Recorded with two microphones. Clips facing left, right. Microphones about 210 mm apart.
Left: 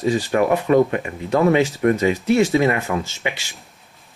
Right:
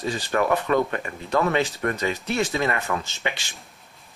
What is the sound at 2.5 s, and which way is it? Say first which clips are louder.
Speech: left 7 dB; 15° left (ahead or behind).